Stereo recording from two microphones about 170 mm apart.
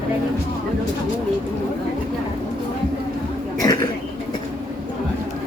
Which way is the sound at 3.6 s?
25° left (ahead or behind).